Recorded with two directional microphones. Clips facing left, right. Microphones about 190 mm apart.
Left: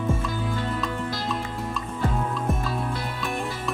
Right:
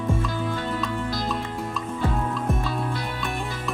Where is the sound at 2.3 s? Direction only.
Centre (ahead or behind).